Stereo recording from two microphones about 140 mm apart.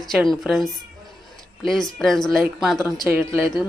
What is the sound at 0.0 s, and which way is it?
Speech, centre (ahead or behind).